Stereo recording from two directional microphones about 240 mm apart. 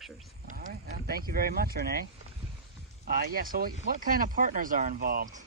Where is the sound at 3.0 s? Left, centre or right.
Right.